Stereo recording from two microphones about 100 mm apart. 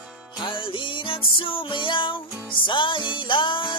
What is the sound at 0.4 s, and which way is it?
Music, 60° left (ahead or behind).